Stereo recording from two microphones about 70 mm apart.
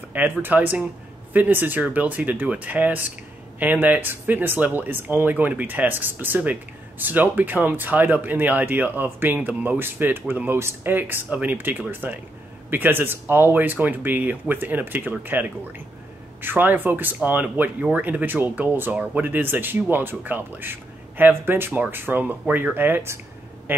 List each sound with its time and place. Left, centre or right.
0.1 s speech: right